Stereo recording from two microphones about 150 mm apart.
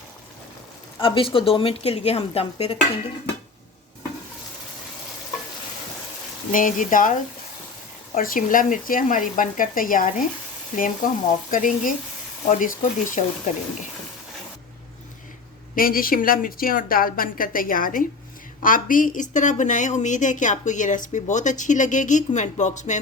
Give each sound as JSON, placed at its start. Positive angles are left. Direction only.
{"t": 0.9, "sound": "speech", "side_deg": 35}
{"t": 6.5, "sound": "a woman's voice", "side_deg": 60}
{"t": 13.1, "sound": "speech", "side_deg": 50}
{"t": 15.7, "sound": "a woman's voice", "side_deg": 70}